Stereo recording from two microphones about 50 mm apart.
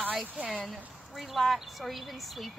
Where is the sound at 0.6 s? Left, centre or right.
Centre.